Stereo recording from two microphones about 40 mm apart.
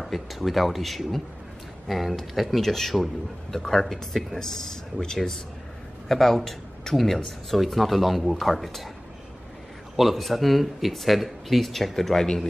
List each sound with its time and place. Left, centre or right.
0.0 s speech: centre
7.2 s speech: centre
9.9 s speech: centre